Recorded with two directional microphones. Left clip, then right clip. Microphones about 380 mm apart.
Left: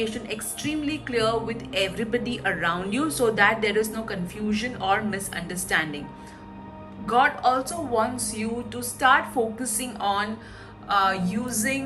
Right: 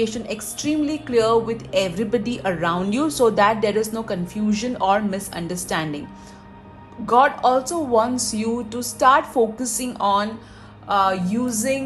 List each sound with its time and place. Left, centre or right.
0.0 s a woman's voice: centre
7.0 s a woman's voice: centre